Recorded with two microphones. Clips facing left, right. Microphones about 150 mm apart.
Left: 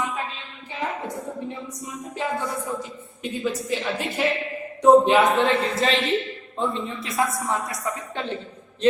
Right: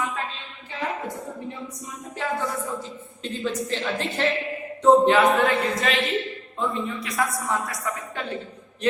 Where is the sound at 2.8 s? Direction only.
10° left (ahead or behind).